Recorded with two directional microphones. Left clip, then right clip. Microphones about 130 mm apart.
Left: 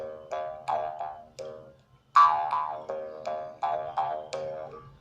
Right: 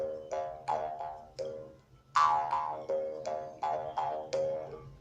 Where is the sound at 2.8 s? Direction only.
15° right (ahead or behind).